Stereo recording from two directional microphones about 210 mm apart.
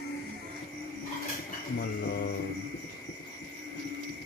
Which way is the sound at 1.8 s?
45° left (ahead or behind).